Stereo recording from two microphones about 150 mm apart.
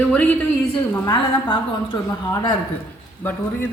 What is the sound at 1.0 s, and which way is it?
Speech, 30° left (ahead or behind).